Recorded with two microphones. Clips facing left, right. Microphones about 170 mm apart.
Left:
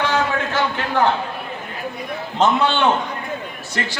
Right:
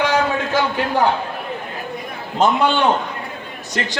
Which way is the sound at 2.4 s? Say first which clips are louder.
Right 1 dB; 10° right (ahead or behind).